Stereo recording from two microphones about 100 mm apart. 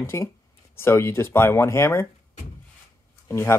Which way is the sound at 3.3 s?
30° left (ahead or behind).